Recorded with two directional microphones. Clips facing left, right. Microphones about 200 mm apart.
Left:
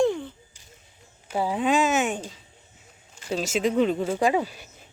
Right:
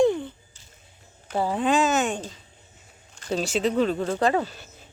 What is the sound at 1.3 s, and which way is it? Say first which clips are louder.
Speech: even; 10° left (ahead or behind).